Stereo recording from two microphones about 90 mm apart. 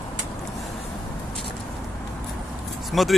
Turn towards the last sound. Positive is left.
turn(degrees=0)  # may be behind; listen again after turning